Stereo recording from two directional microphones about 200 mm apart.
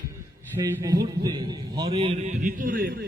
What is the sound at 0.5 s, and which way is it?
A man's voice, 15° right (ahead or behind).